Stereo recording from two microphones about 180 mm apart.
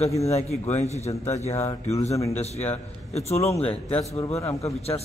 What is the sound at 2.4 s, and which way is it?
Speech, 35° left (ahead or behind).